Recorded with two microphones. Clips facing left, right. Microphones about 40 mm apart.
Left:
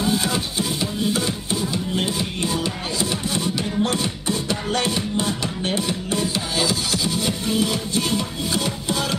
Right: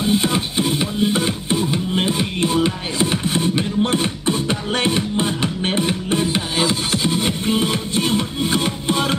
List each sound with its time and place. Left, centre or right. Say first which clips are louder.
0.0 s music: right 3 dB; right